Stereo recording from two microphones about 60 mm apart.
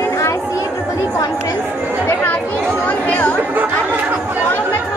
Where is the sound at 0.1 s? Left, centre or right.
Left.